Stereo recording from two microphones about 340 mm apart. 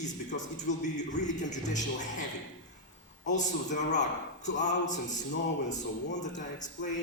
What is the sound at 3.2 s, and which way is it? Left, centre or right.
Speech, left.